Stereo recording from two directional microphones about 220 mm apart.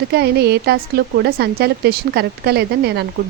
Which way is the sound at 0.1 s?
45° right (ahead or behind).